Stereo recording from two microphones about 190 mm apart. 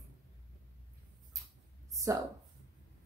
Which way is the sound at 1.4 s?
15° right (ahead or behind).